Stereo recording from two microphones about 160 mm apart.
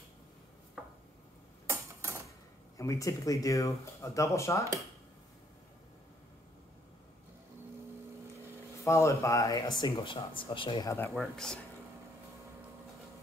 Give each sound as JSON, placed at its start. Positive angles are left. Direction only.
{"t": 0.8, "sound": "chopping", "side_deg": 0}
{"t": 1.7, "sound": "a sound", "side_deg": -15}
{"t": 2.8, "sound": "speech", "side_deg": 20}
{"t": 8.8, "sound": "speech", "side_deg": 20}
{"t": 10.9, "sound": "speech", "side_deg": 15}
{"t": 11.1, "sound": "speech", "side_deg": 5}